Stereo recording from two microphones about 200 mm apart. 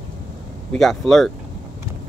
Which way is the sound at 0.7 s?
Centre (ahead or behind).